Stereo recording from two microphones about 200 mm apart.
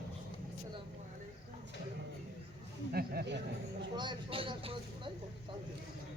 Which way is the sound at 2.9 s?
50° right (ahead or behind).